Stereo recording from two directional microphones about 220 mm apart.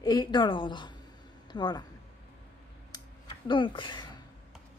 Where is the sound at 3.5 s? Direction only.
20° left (ahead or behind).